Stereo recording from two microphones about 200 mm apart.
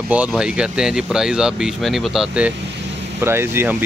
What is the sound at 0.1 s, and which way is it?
Speech, 5° right (ahead or behind).